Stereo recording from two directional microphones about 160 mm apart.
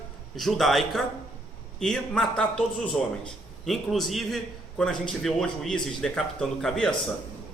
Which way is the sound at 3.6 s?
Centre (ahead or behind).